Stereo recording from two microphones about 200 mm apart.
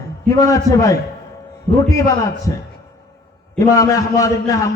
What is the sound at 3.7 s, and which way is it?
Speech, 15° left (ahead or behind).